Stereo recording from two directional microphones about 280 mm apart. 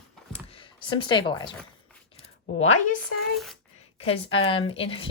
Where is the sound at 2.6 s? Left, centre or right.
Left.